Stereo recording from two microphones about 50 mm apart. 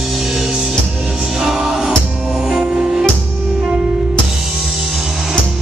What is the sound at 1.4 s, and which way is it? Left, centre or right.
Music, centre.